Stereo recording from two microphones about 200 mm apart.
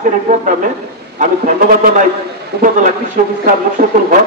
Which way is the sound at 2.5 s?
50° right (ahead or behind).